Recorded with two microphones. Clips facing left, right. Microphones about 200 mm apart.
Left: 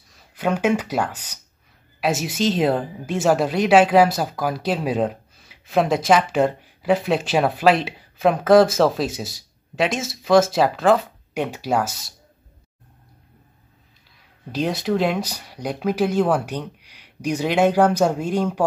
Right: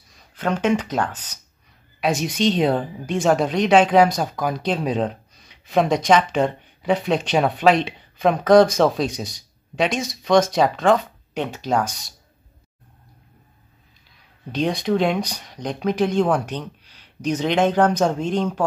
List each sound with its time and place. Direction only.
0.1 s a woman's voice: 10° left (ahead or behind)
14.5 s speech: 5° left (ahead or behind)